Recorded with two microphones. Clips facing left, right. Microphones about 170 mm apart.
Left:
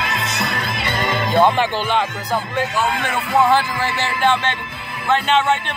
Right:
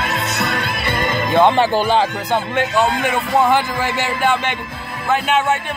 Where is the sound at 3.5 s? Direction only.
15° right (ahead or behind).